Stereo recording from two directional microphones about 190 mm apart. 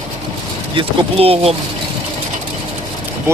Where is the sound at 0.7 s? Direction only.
30° right (ahead or behind).